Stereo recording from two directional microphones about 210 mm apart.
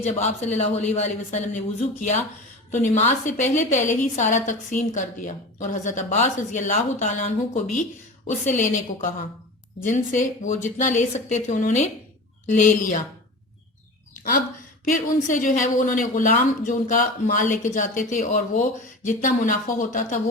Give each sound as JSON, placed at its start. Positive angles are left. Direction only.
{"t": 0.0, "sound": "speech", "side_deg": 35}
{"t": 14.9, "sound": "speech", "side_deg": 40}